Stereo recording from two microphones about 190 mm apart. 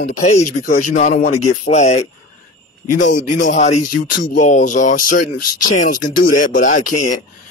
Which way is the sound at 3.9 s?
80° left.